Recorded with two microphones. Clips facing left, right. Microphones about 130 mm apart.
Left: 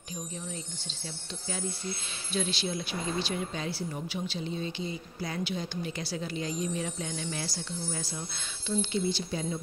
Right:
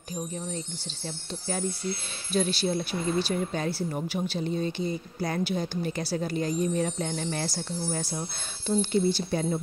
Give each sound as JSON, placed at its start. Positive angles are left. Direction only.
{"t": 2.3, "sound": "speech", "side_deg": -45}